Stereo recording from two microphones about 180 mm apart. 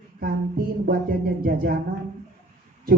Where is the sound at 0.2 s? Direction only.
55° right (ahead or behind).